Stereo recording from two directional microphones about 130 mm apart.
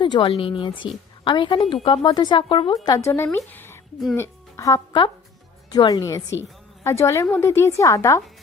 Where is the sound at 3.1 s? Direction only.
15° left (ahead or behind).